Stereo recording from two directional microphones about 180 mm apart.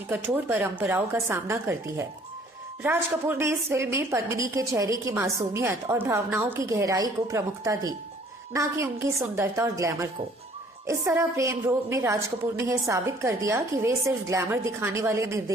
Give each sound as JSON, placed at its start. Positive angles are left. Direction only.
{"t": 0.1, "sound": "a woman's voice", "side_deg": -10}